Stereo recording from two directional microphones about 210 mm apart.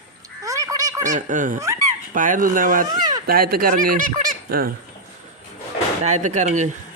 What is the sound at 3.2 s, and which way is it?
Speech, 45° right (ahead or behind).